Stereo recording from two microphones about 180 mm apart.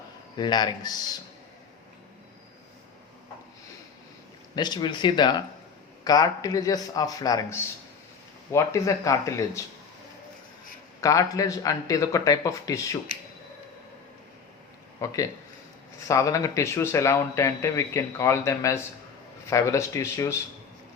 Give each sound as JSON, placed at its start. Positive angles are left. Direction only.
{"t": 0.3, "sound": "speech", "side_deg": 25}
{"t": 4.5, "sound": "a man's voice", "side_deg": 25}
{"t": 11.0, "sound": "speech", "side_deg": 20}
{"t": 15.0, "sound": "a man's voice", "side_deg": 20}